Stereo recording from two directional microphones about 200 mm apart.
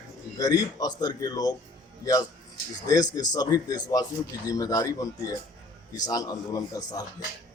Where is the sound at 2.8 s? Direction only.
20° left (ahead or behind).